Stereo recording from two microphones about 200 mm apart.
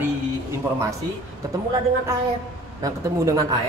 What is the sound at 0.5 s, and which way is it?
Speech, 15° right (ahead or behind).